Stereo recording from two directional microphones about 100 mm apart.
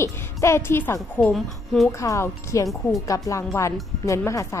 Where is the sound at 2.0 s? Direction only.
30° left (ahead or behind).